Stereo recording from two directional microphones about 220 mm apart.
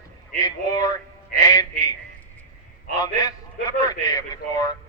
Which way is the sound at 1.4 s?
15° left (ahead or behind).